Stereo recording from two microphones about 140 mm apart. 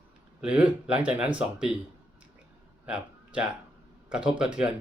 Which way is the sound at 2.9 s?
5° right (ahead or behind).